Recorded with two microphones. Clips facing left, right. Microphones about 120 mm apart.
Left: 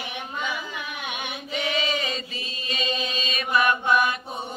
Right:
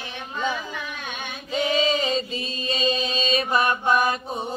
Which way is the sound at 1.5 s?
30° right (ahead or behind).